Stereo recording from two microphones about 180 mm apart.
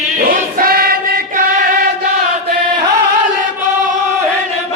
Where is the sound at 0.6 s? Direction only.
55° right (ahead or behind).